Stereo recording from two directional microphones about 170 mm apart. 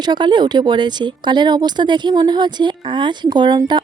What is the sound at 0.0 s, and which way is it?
Speech, 25° right (ahead or behind).